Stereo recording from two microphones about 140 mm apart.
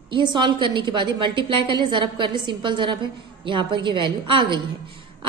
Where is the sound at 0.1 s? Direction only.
35° right (ahead or behind).